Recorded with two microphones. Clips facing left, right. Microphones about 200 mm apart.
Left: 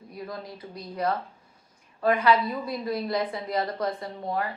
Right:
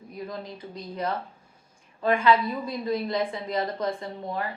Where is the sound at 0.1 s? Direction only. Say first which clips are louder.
Right 1 dB; 20° right (ahead or behind).